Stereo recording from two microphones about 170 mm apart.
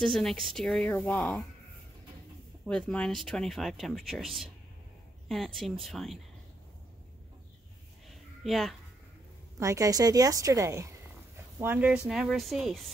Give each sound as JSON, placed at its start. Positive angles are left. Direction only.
{"t": 0.0, "sound": "speech", "side_deg": 5}
{"t": 2.6, "sound": "speech", "side_deg": 5}
{"t": 8.1, "sound": "a sound", "side_deg": 0}
{"t": 9.6, "sound": "a woman's voice", "side_deg": -20}